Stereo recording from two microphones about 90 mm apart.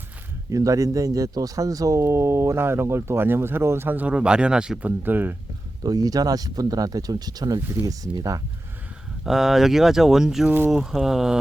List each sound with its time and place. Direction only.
0.5 s speech: 40° right (ahead or behind); by 5.4 s 20° right (ahead or behind)
5.8 s speech: 45° right (ahead or behind)
7.6 s speech: 20° right (ahead or behind)
7.9 s speech: 45° right (ahead or behind)
9.2 s speech: 5° right (ahead or behind)